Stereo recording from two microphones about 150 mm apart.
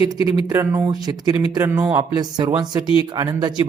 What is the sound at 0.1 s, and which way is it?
Speech, 25° right (ahead or behind).